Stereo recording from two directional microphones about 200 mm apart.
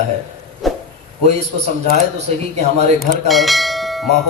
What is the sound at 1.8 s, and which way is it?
Speech, 35° right (ahead or behind).